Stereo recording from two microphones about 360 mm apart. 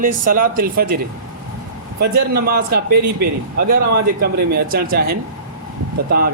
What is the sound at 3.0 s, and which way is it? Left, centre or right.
Speech, right.